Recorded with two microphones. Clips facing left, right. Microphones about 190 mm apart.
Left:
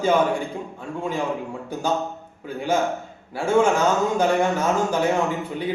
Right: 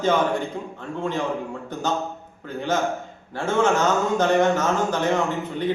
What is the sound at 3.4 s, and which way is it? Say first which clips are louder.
A man's voice: left 2 dB; 10° left (ahead or behind).